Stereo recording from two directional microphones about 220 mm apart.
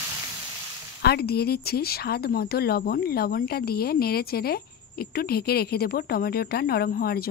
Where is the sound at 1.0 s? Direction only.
45° left (ahead or behind).